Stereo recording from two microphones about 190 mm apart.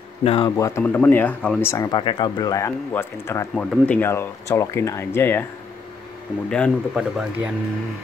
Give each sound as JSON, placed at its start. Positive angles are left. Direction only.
{"t": 0.2, "sound": "speech", "side_deg": 30}
{"t": 0.6, "sound": "speech", "side_deg": 15}
{"t": 6.5, "sound": "speech", "side_deg": 0}